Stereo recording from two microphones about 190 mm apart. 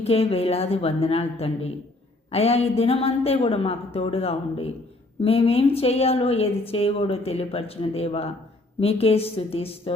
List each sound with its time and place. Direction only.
0.0 s a woman's voice: 30° left (ahead or behind)